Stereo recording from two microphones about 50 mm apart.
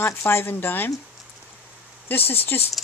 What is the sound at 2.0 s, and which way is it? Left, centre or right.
Speech, left.